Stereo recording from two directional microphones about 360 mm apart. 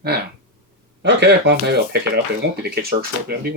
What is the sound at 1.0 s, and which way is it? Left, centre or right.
Speech, right.